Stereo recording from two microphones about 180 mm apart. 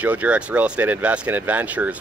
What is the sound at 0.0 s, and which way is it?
Speech, 10° right (ahead or behind).